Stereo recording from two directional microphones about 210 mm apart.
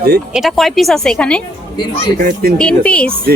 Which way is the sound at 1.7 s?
20° left (ahead or behind).